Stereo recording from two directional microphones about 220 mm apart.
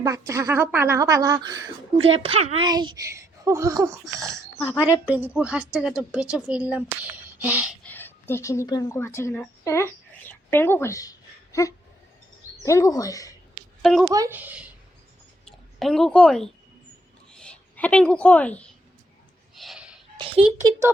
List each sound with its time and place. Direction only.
0.0 s a woman's voice: 15° right (ahead or behind)
4.0 s a woman's voice: centre (ahead or behind)
4.8 s a woman's voice: 5° right (ahead or behind)
7.9 s speech: 10° left (ahead or behind)
13.8 s a woman's voice: centre (ahead or behind)
14.1 s a woman's voice: 15° right (ahead or behind); by 16.5 s centre (ahead or behind)
17.3 s a sound: 5° left (ahead or behind)